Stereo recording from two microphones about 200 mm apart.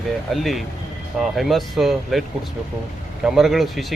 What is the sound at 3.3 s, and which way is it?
Speech, centre (ahead or behind).